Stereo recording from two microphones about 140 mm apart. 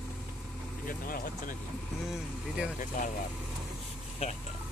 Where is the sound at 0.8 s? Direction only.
90° left.